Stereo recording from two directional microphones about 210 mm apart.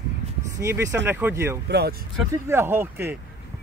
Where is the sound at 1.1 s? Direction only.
10° right (ahead or behind).